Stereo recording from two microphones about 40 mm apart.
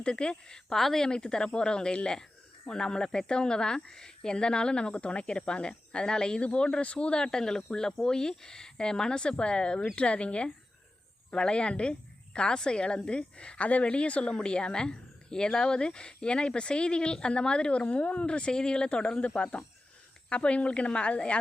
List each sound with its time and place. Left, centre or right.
0.0 s speech: left
0.8 s a woman's voice: centre
1.0 s speech: centre